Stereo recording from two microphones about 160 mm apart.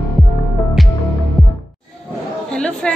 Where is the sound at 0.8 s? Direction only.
Centre (ahead or behind).